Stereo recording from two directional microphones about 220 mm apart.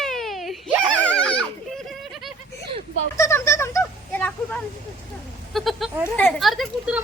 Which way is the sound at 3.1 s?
15° left (ahead or behind).